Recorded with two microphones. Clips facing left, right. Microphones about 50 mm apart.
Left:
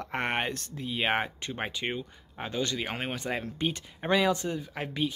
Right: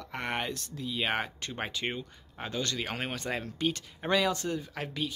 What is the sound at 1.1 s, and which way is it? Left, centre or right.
Speech, centre.